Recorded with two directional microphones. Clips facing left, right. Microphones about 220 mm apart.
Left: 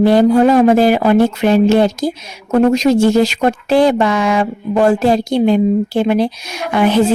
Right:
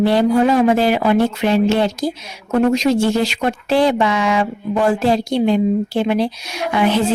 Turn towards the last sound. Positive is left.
turn(degrees=50)  # may be behind; listen again after turning